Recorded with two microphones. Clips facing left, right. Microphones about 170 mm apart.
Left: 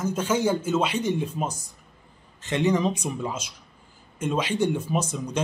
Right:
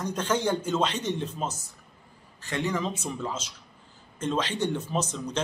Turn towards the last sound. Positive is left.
turn(degrees=10)  # may be behind; listen again after turning